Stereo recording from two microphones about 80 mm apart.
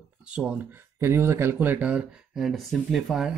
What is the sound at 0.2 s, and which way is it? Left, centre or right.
Speech, centre.